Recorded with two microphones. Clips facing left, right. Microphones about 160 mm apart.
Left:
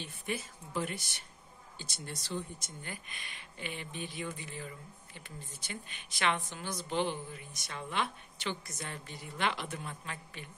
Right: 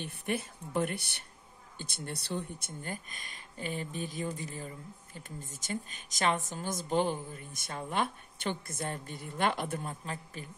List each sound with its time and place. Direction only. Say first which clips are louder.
0.0 s speech: right 4 dB; 60° right (ahead or behind)
2.8 s speech: right 6 dB; 45° right (ahead or behind)